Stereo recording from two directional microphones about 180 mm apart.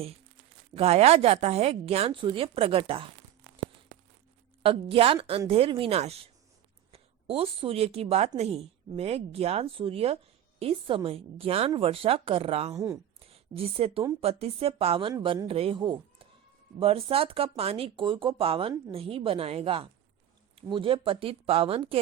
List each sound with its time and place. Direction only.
0.8 s speech: 35° right (ahead or behind)
4.6 s a woman's voice: 30° right (ahead or behind)
12.7 s speech: 20° right (ahead or behind)
13.2 s a woman's voice: 35° right (ahead or behind)